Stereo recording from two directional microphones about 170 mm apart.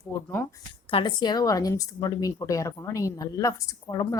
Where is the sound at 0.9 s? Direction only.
30° left (ahead or behind).